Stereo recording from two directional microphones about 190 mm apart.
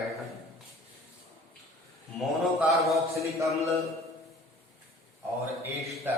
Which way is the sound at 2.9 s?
15° right (ahead or behind).